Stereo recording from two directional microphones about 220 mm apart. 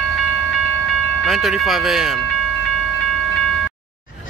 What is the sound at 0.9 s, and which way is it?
Speech, centre (ahead or behind).